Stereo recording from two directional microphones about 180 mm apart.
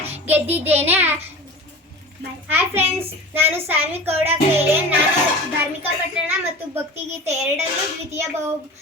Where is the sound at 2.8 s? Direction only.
35° right (ahead or behind).